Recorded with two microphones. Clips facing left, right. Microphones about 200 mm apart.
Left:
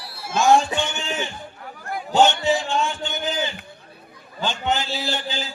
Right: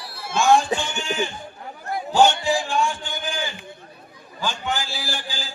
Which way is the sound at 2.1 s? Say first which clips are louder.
Even; 25° left (ahead or behind).